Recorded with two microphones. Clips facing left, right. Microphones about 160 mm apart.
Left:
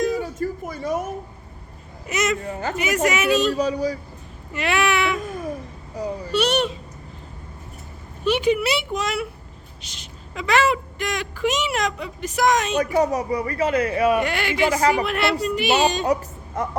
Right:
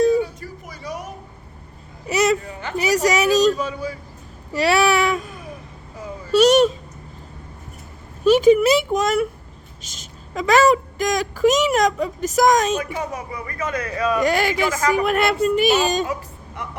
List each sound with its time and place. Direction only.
0.2 s a sound: 45° left (ahead or behind)
2.0 s a sound: 35° right (ahead or behind)
2.4 s speech: 40° left (ahead or behind)
2.7 s a woman's voice: 35° right (ahead or behind)
3.5 s speech: 40° left (ahead or behind)
4.5 s a woman's voice: 35° right (ahead or behind)
5.2 s a sound: 45° left (ahead or behind)
6.3 s speech: 40° right (ahead or behind)
8.2 s a woman's voice: 40° right (ahead or behind)
12.8 s speech: 40° left (ahead or behind)
14.2 s a woman's voice: 40° right (ahead or behind)